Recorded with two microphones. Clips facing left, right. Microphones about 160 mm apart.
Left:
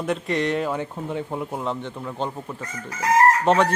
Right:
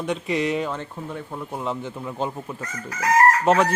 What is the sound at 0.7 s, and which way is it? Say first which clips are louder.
Speech: left 4 dB; 10° left (ahead or behind).